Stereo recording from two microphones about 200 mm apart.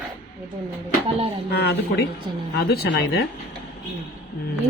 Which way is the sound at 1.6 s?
55° left (ahead or behind).